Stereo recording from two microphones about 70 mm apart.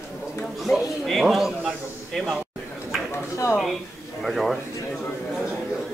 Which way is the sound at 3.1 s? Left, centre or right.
Left.